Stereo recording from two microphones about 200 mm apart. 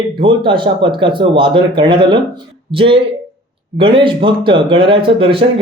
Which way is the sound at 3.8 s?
25° right (ahead or behind).